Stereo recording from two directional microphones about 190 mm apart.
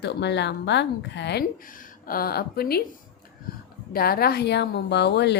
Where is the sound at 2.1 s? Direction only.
50° left (ahead or behind).